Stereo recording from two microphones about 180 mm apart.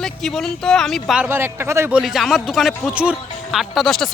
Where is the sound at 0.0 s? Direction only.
Centre (ahead or behind).